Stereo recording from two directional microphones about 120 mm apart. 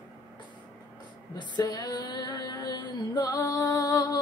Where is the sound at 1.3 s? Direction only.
35° left (ahead or behind).